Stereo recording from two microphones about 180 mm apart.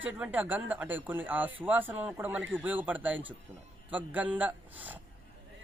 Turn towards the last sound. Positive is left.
turn(degrees=-10)  # may be behind; listen again after turning